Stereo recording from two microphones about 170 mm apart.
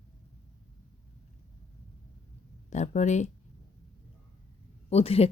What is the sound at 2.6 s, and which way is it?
Speech, 45° left (ahead or behind).